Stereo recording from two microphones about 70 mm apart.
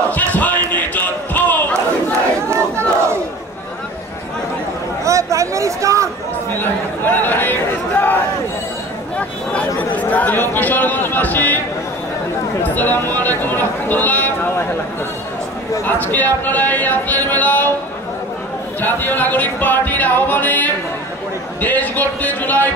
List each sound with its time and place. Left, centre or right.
0.1 s a sound: left
5.0 s a sound: right
6.6 s speech: left
9.8 s speech: left
12.7 s speech: left
15.8 s speech: left
18.8 s speech: left